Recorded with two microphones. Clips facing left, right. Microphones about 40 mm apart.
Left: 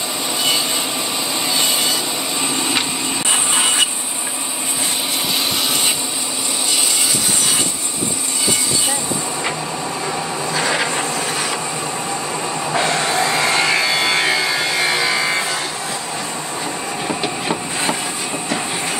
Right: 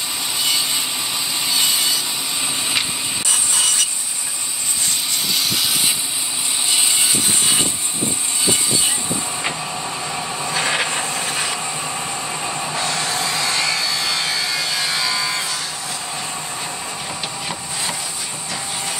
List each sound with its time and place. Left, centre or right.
1.5 s vehicle: centre
3.3 s wood: left
10.5 s vehicle: left
12.7 s music: left
17.1 s vehicle: left